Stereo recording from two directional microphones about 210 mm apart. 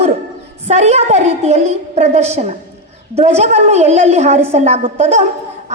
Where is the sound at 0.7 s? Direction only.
30° right (ahead or behind).